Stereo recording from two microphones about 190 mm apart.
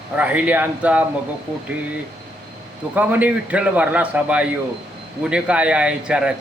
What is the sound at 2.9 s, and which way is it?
A man's voice, 10° right (ahead or behind).